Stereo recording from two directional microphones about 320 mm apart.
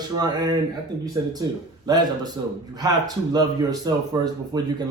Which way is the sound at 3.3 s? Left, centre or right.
Centre.